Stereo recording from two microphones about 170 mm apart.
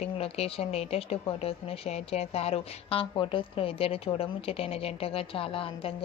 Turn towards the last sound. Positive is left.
turn(degrees=30)  # may be behind; listen again after turning